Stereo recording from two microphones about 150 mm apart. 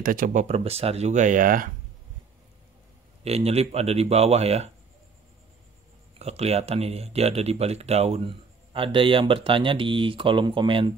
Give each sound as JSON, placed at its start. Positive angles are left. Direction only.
{"t": 0.0, "sound": "speech", "side_deg": -65}
{"t": 3.3, "sound": "speech", "side_deg": -45}
{"t": 6.1, "sound": "speech", "side_deg": -45}